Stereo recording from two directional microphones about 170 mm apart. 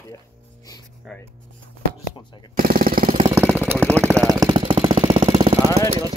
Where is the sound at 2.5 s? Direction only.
60° right (ahead or behind).